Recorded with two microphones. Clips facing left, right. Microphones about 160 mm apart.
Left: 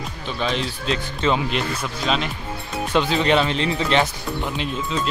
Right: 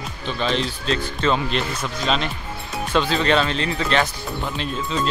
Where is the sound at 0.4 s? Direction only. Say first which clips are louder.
Right 1 dB; 10° left (ahead or behind).